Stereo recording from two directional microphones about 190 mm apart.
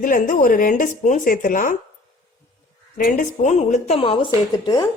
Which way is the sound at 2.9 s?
45° left (ahead or behind).